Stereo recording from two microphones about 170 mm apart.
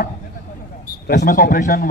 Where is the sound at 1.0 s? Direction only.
65° left (ahead or behind).